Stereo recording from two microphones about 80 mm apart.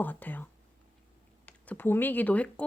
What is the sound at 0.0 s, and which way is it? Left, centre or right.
Speech, left.